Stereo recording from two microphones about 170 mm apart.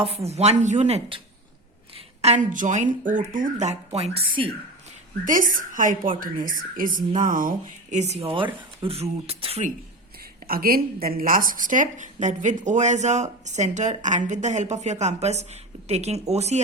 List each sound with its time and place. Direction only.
0.3 s speech: 40° right (ahead or behind)
2.2 s a woman's voice: 45° right (ahead or behind)
5.2 s a woman's voice: 50° right (ahead or behind)
10.4 s a woman's voice: 60° right (ahead or behind); by 16.6 s 40° right (ahead or behind)